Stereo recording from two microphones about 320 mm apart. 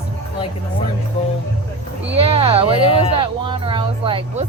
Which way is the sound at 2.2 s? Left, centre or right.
Centre.